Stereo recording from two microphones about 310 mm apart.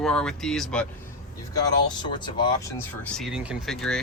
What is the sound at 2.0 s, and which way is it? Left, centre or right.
Speech, centre.